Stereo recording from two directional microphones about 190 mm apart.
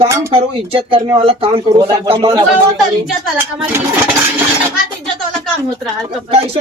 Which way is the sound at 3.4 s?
10° right (ahead or behind).